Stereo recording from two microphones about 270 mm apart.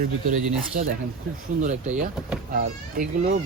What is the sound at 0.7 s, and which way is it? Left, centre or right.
Speech, right.